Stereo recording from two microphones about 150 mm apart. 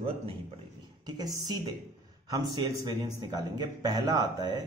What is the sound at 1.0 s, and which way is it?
Speech, 25° right (ahead or behind).